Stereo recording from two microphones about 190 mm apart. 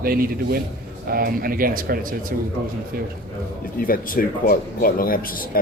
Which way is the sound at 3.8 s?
50° left (ahead or behind).